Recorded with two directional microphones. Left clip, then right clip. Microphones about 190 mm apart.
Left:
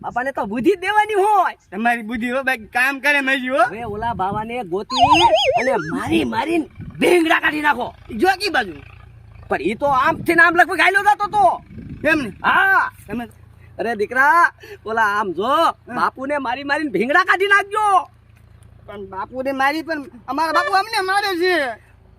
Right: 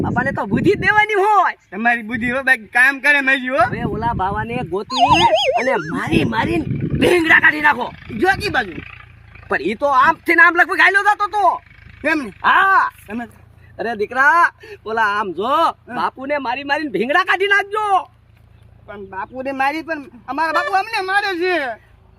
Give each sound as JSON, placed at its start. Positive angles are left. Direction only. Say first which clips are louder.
{"t": 0.0, "sound": "speech", "louder": "right 2 dB", "side_deg": 10}
{"t": 0.9, "sound": "speech", "louder": "right 3 dB", "side_deg": 20}
{"t": 1.7, "sound": "speech", "louder": "right 2 dB", "side_deg": -5}
{"t": 3.8, "sound": "speech", "louder": "right 2 dB", "side_deg": 10}
{"t": 4.9, "sound": "speech", "louder": "even", "side_deg": 0}
{"t": 5.9, "sound": "speech", "louder": "right 1 dB", "side_deg": 15}
{"t": 8.2, "sound": "speech", "louder": "even", "side_deg": -5}
{"t": 8.7, "sound": "speech", "louder": "right 6 dB", "side_deg": 55}
{"t": 9.5, "sound": "speech", "louder": "right 1 dB", "side_deg": 15}
{"t": 12.0, "sound": "speech", "louder": "left 1 dB", "side_deg": -10}
{"t": 12.4, "sound": "speech", "louder": "right 4 dB", "side_deg": 15}
{"t": 13.1, "sound": "speech", "louder": "even", "side_deg": -10}
{"t": 13.7, "sound": "speech", "louder": "even", "side_deg": 15}
{"t": 18.9, "sound": "speech", "louder": "right 1 dB", "side_deg": -5}